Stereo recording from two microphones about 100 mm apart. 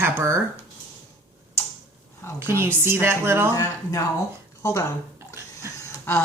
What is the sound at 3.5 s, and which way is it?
Speech, 35° left (ahead or behind).